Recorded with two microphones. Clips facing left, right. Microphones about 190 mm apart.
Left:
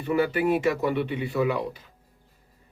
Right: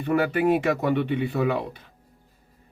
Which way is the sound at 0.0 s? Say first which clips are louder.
Right 2 dB; 55° right (ahead or behind).